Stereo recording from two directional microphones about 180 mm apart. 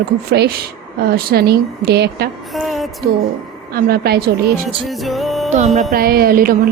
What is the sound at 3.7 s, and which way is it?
Speech, 55° right (ahead or behind).